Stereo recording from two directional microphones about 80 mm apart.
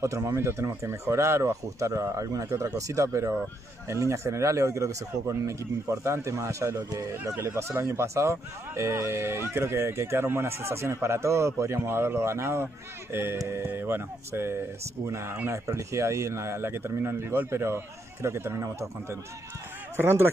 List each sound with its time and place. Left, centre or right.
0.0 s a man's voice: right